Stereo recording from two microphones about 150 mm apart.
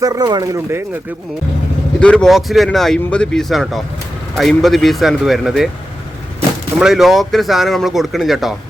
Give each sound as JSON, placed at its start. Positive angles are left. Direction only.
{"t": 0.0, "sound": "speech", "side_deg": -25}
{"t": 2.0, "sound": "speech", "side_deg": 5}
{"t": 6.7, "sound": "speech", "side_deg": -5}